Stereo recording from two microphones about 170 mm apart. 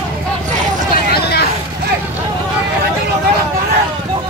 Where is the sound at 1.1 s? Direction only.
70° left (ahead or behind).